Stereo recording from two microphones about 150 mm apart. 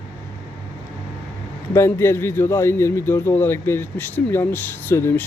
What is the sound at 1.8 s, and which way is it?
A man's voice, 15° left (ahead or behind).